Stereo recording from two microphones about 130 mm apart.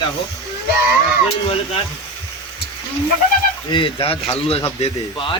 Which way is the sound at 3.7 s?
40° left (ahead or behind).